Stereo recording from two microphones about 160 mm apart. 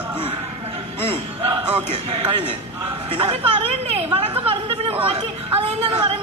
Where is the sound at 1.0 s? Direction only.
35° right (ahead or behind).